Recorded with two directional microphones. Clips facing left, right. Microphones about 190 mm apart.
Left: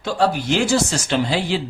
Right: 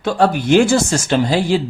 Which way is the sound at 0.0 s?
55° right (ahead or behind).